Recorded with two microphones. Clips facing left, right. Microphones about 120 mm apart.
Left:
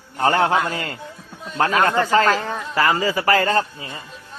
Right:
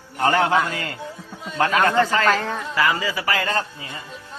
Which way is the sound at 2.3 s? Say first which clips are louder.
Even; 10° left (ahead or behind).